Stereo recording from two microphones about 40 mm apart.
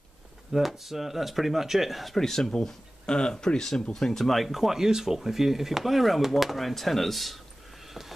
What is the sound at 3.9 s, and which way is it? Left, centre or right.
Speech, centre.